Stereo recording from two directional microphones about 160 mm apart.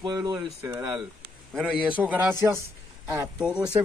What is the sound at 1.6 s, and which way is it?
Speech, 10° right (ahead or behind).